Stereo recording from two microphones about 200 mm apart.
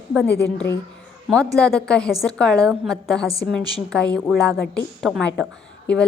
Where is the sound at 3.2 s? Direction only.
15° right (ahead or behind).